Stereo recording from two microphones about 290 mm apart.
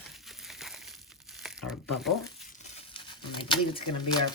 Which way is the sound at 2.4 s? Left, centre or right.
Left.